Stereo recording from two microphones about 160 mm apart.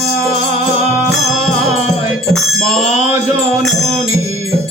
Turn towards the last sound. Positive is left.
turn(degrees=5)  # may be behind; listen again after turning